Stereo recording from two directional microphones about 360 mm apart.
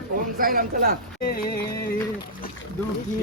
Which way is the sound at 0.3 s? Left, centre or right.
Right.